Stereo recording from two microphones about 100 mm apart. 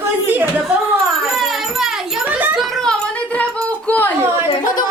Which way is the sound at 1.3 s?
5° right (ahead or behind).